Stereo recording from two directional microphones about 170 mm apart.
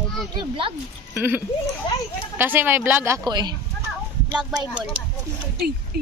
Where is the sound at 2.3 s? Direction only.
10° right (ahead or behind).